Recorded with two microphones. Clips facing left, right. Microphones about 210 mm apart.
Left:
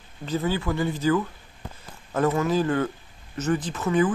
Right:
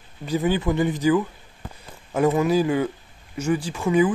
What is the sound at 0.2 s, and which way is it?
Speech, 15° right (ahead or behind).